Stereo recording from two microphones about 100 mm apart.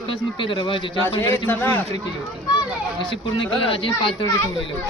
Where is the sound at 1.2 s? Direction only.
20° left (ahead or behind).